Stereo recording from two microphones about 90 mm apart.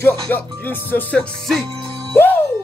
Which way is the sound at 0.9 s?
15° left (ahead or behind).